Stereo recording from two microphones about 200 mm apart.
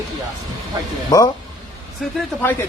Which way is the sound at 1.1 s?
20° left (ahead or behind).